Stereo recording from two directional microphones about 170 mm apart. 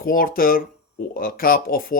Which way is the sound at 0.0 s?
60° left (ahead or behind).